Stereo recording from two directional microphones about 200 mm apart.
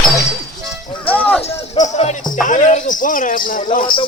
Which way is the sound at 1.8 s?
20° left (ahead or behind).